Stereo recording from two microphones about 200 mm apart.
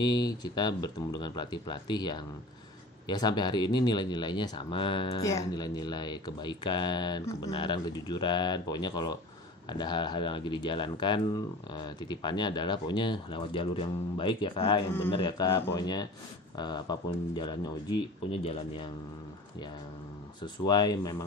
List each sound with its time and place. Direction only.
0.0 s speech: 20° left (ahead or behind)
20.6 s speech: 20° left (ahead or behind)